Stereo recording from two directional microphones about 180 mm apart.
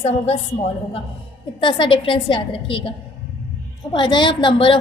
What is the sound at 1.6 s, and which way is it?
A woman's voice, 25° left (ahead or behind).